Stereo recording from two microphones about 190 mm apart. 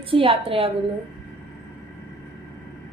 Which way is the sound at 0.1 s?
30° right (ahead or behind).